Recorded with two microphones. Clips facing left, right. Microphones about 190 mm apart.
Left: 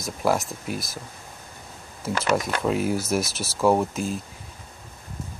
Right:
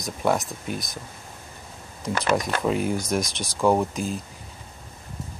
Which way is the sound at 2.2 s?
Centre (ahead or behind).